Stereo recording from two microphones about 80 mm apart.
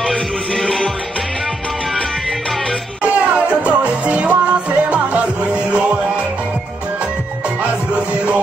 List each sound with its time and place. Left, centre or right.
0.0 s music: centre
3.0 s music: centre
7.9 s music: centre